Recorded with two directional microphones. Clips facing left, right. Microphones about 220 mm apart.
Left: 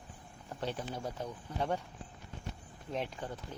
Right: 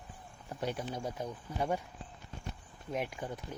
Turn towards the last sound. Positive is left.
turn(degrees=-10)  # may be behind; listen again after turning